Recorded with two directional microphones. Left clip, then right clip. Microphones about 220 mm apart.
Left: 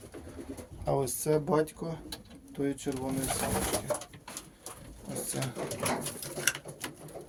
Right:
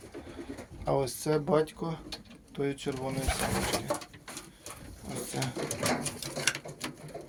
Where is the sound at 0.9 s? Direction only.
25° left (ahead or behind).